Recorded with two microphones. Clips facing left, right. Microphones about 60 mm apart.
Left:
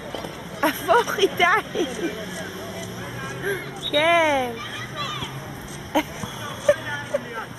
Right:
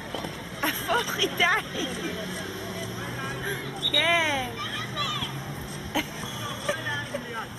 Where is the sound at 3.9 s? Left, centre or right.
Left.